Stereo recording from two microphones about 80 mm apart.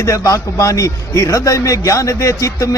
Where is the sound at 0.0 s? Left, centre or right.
Left.